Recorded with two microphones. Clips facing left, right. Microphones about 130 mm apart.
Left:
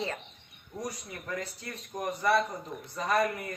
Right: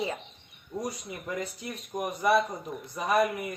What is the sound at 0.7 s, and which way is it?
A woman's voice, 20° right (ahead or behind).